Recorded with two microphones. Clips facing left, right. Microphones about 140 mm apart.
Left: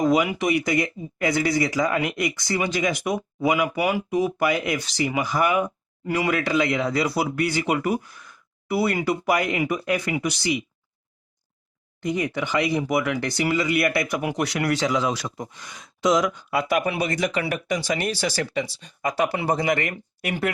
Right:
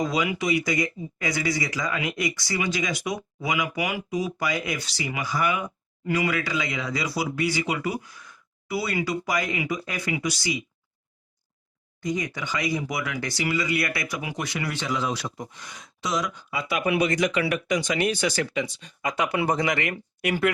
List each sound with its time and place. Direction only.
0.0 s speech: 55° left (ahead or behind)
3.5 s speech: 40° left (ahead or behind)
4.1 s speech: 55° left (ahead or behind)
12.0 s speech: 60° left (ahead or behind); by 15.4 s 90° left
16.0 s speech: 80° left
16.6 s speech: 45° left (ahead or behind)
17.9 s speech: 35° left (ahead or behind)
19.6 s speech: 45° left (ahead or behind)